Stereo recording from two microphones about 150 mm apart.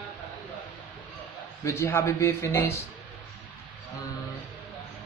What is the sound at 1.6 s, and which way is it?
Speech, 15° left (ahead or behind).